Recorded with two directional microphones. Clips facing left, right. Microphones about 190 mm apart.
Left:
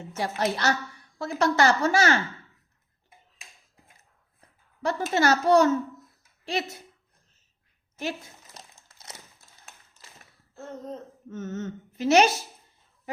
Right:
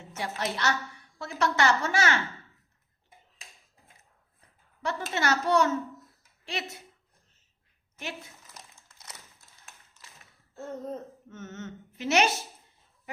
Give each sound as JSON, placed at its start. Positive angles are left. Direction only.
{"t": 0.2, "sound": "speech", "side_deg": 40}
{"t": 4.8, "sound": "speech", "side_deg": 40}
{"t": 10.5, "sound": "gasp", "side_deg": 0}
{"t": 11.3, "sound": "speech", "side_deg": 35}